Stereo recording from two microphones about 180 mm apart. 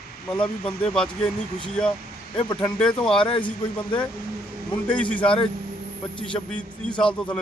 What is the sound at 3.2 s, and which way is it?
Speech, 30° left (ahead or behind).